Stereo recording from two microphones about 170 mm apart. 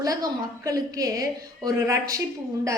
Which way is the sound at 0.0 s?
20° right (ahead or behind).